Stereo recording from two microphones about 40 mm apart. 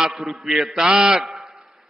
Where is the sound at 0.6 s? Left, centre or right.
Right.